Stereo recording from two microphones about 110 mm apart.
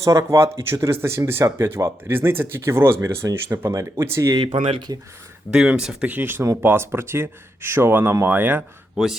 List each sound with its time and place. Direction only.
0.0 s speech: 30° right (ahead or behind)
4.7 s speech: 40° right (ahead or behind)
5.5 s speech: 5° right (ahead or behind)